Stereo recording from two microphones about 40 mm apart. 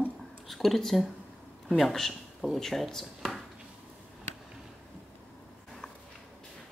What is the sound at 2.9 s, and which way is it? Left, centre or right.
Speech, centre.